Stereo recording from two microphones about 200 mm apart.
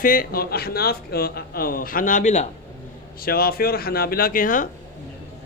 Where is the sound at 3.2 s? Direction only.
50° left (ahead or behind).